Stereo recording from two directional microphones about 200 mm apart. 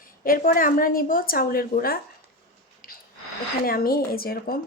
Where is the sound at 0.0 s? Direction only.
45° left (ahead or behind).